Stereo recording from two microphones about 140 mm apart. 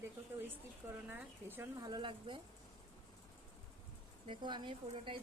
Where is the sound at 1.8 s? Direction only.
30° right (ahead or behind).